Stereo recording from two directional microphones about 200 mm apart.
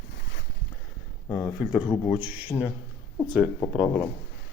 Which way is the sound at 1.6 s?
5° right (ahead or behind).